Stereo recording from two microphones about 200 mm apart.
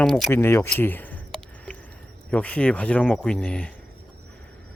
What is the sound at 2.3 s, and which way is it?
Speech, 5° left (ahead or behind).